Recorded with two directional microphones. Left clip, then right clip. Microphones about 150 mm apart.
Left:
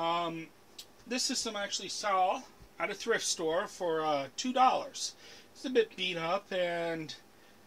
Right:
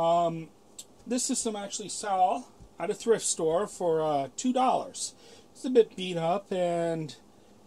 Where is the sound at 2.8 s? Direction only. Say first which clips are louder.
Right 5 dB; 55° right (ahead or behind).